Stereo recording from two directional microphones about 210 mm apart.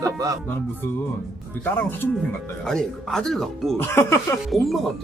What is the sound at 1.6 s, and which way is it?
Speech, 10° left (ahead or behind).